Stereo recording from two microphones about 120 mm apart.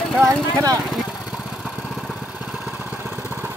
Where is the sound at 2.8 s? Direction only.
20° right (ahead or behind).